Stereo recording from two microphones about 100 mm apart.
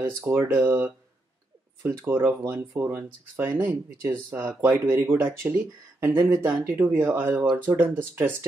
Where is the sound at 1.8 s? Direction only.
25° right (ahead or behind).